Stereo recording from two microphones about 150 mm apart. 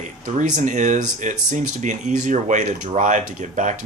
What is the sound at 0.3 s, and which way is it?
Speech, 55° right (ahead or behind).